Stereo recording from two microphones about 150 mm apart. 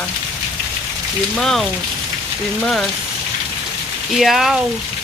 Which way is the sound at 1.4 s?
Centre (ahead or behind).